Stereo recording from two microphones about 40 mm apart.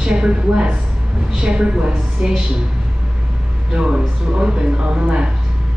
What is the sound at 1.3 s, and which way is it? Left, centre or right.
Speech, right.